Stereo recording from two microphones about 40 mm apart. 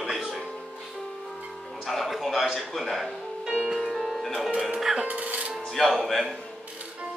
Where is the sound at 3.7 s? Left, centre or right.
Centre.